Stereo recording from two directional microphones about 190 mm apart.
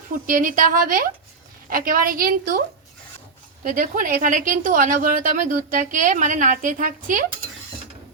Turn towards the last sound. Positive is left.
turn(degrees=-45)  # may be behind; listen again after turning